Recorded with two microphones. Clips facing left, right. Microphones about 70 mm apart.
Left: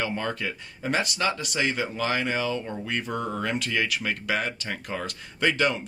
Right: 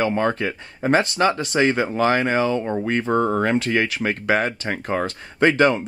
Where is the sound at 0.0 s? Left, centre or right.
Right.